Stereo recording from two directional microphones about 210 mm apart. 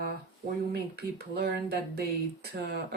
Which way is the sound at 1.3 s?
50° right (ahead or behind).